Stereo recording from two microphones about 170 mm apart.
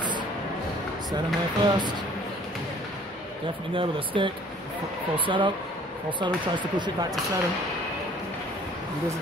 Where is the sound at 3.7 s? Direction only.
30° right (ahead or behind).